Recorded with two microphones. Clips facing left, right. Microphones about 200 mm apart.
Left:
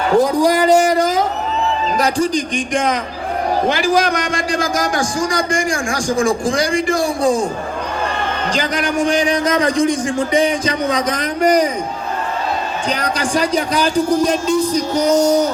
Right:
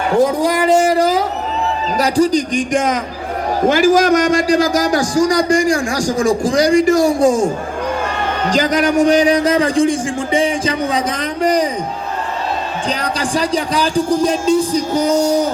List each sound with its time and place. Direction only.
0.3 s a man's voice: 25° right (ahead or behind)
12.9 s a man's voice: 30° right (ahead or behind)
15.1 s music: 10° right (ahead or behind)